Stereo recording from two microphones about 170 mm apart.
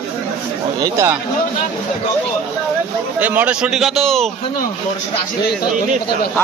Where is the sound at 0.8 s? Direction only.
15° right (ahead or behind).